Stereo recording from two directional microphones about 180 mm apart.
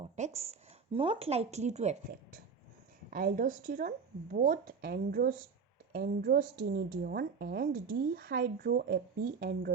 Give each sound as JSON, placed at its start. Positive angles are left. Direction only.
{"t": 0.0, "sound": "a woman's voice", "side_deg": -35}